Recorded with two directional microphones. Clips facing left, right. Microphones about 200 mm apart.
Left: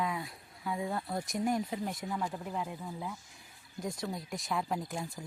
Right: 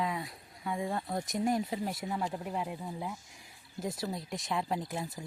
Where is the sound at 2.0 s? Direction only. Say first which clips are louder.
Right 1 dB; 20° right (ahead or behind).